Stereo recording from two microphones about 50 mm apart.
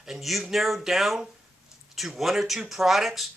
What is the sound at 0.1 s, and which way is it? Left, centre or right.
Speech, centre.